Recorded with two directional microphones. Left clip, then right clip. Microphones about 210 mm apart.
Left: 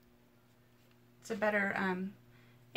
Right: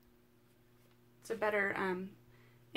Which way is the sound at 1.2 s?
30° right (ahead or behind).